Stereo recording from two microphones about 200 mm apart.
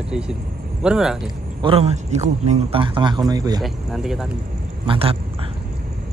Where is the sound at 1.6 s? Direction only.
25° right (ahead or behind).